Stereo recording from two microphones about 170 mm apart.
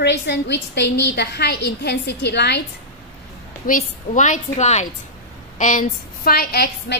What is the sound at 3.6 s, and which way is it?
A woman's voice, 50° left (ahead or behind).